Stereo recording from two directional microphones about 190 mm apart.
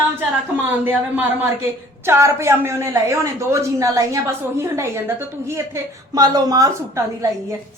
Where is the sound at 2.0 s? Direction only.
15° right (ahead or behind).